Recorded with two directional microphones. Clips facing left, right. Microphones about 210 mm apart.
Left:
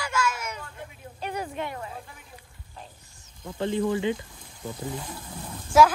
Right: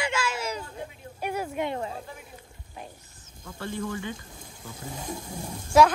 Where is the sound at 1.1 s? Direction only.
10° right (ahead or behind).